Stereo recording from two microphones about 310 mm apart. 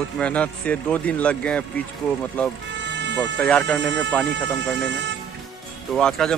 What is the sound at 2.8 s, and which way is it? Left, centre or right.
Music, right.